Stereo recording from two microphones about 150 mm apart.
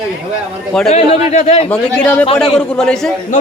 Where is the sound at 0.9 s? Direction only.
50° left (ahead or behind).